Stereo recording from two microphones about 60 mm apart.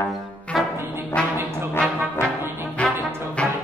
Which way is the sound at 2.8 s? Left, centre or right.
Left.